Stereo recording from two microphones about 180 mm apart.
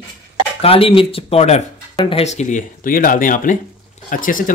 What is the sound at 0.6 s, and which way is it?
Speech, 30° left (ahead or behind).